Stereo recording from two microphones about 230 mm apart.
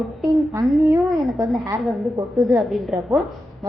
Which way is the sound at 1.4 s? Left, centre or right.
Centre.